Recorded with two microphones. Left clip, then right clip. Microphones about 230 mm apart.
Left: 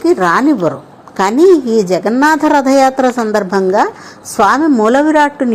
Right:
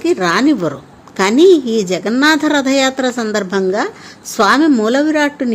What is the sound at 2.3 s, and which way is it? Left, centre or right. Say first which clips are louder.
A woman's voice: left 4 dB; centre.